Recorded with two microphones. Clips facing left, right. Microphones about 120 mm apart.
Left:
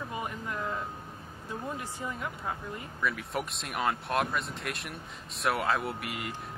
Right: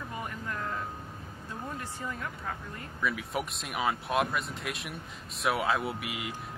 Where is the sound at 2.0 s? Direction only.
15° left (ahead or behind).